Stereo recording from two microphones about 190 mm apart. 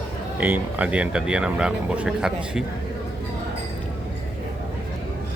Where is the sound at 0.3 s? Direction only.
10° right (ahead or behind).